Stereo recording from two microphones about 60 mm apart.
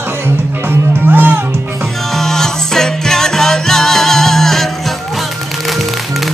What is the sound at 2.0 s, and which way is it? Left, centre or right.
Music, centre.